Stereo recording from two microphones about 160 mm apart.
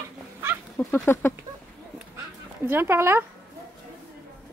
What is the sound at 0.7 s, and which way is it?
Speech, 10° left (ahead or behind).